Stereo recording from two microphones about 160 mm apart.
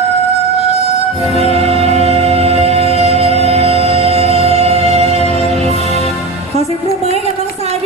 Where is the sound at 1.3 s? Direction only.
40° right (ahead or behind).